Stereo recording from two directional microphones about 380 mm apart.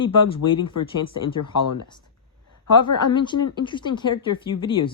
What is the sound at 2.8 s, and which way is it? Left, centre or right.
A woman's voice, centre.